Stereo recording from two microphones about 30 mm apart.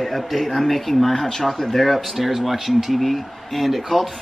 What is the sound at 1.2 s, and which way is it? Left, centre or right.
Speech, centre.